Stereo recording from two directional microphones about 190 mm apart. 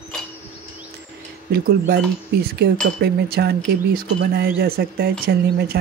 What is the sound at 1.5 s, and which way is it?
Speech, 55° right (ahead or behind).